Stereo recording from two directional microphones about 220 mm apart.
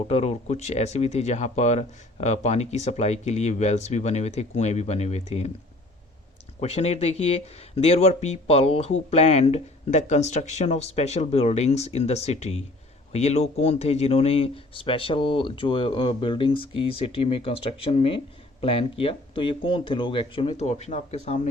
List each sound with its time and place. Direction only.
0.1 s speech: 30° left (ahead or behind)
6.6 s speech: 30° left (ahead or behind)